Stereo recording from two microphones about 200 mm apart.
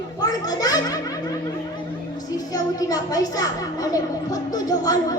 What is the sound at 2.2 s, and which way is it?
A woman's voice, 20° left (ahead or behind).